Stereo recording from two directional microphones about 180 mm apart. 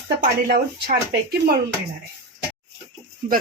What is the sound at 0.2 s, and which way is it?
Speech, 55° right (ahead or behind).